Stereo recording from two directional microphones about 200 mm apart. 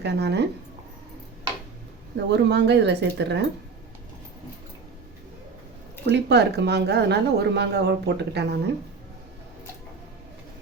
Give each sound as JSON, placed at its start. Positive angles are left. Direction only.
{"t": 0.0, "sound": "speech", "side_deg": -55}
{"t": 2.3, "sound": "speech", "side_deg": -60}
{"t": 6.1, "sound": "speech", "side_deg": -55}